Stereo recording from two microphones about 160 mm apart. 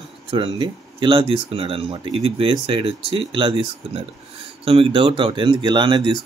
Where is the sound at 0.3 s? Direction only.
35° right (ahead or behind).